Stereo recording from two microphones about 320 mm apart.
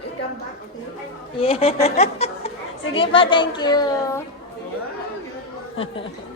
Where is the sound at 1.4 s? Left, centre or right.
Centre.